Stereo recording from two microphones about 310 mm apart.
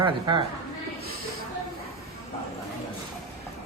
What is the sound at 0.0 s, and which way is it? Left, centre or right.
Speech, centre.